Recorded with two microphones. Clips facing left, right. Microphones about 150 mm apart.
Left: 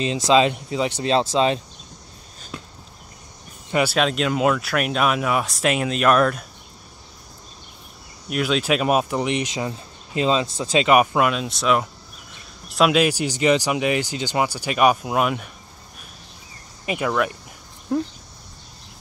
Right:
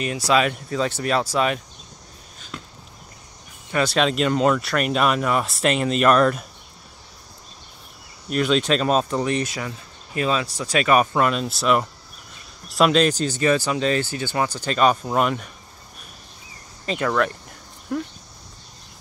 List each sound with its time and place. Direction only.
0.0 s speech: 25° left (ahead or behind)
3.8 s speech: centre (ahead or behind)
8.3 s speech: 5° left (ahead or behind)
16.8 s speech: 10° left (ahead or behind)
17.9 s speech: 25° left (ahead or behind)